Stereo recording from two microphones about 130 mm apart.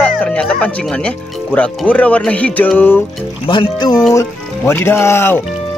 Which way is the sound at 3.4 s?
35° left (ahead or behind).